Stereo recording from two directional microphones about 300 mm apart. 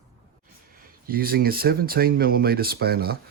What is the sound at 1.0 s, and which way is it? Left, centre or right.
Speech, right.